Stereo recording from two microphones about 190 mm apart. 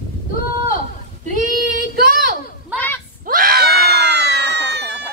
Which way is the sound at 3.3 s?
50° right (ahead or behind).